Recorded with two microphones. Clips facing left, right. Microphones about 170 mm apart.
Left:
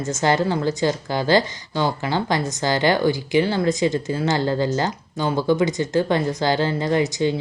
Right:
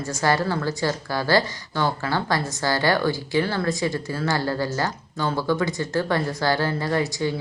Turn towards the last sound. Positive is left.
turn(degrees=20)  # may be behind; listen again after turning